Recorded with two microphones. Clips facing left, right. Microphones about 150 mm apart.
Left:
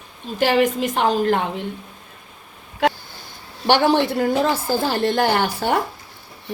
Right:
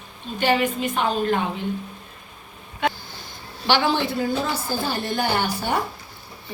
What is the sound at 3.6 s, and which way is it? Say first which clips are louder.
A woman's voice: left 5 dB; 60° left (ahead or behind).